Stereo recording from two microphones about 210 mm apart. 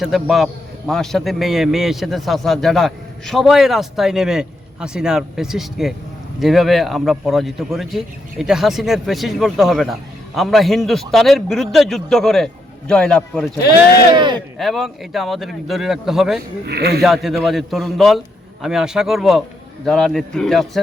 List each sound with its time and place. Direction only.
0.0 s a man's voice: centre (ahead or behind)
14.1 s speech: 20° right (ahead or behind)
14.6 s a man's voice: centre (ahead or behind)
16.6 s speech: 50° right (ahead or behind)
17.0 s a man's voice: centre (ahead or behind)